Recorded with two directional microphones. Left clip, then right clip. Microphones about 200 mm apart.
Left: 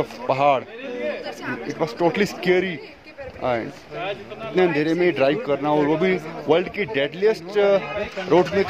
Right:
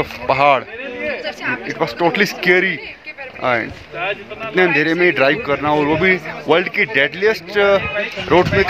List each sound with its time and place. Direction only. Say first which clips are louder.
0.0 s a man's voice: right 5 dB; 10° right (ahead or behind)
1.2 s speech: right 7 dB; 35° left (ahead or behind)
1.8 s a man's voice: right 4 dB; 5° right (ahead or behind)